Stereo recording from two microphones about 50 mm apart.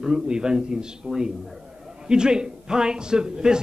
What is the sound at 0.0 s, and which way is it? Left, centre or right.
A man's voice, centre.